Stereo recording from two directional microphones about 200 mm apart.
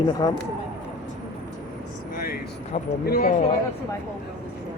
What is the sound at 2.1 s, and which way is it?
Speech, 45° left (ahead or behind).